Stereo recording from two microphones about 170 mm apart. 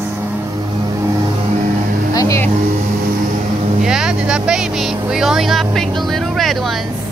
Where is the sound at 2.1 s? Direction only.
15° left (ahead or behind).